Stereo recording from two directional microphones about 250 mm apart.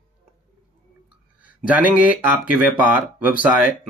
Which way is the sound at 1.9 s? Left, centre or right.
Centre.